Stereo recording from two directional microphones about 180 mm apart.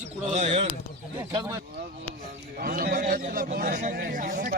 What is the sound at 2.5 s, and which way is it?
A man's voice, 55° right (ahead or behind).